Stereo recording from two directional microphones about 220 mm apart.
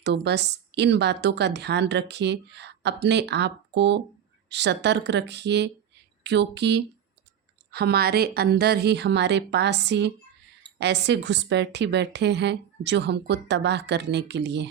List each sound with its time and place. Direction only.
0.0 s a woman's voice: 50° right (ahead or behind)